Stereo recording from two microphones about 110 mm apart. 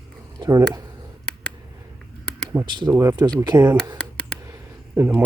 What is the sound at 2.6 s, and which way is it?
Speech, 45° right (ahead or behind).